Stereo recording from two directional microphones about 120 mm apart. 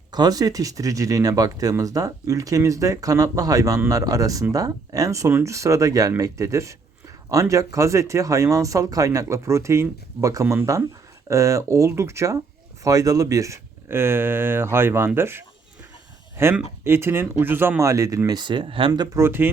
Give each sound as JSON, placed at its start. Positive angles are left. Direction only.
{"t": 0.1, "sound": "speech", "side_deg": -35}
{"t": 19.1, "sound": "speech", "side_deg": -20}